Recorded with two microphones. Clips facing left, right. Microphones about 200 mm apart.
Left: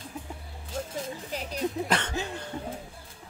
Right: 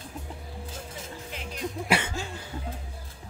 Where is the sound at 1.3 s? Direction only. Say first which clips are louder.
Left 4 dB; 40° left (ahead or behind).